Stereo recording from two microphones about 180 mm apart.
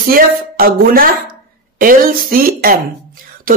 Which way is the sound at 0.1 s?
55° right (ahead or behind).